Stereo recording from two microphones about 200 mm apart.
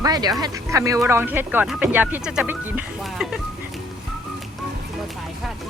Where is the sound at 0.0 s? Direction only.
20° right (ahead or behind); by 3.4 s 5° right (ahead or behind).